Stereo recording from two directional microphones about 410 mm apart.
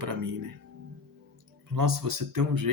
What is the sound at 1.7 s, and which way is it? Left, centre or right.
Speech, right.